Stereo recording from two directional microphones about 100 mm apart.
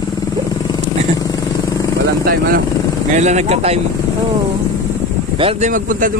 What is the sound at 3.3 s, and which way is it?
Speech, 90° right.